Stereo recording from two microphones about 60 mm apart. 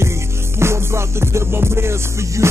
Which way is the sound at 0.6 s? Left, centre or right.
Right.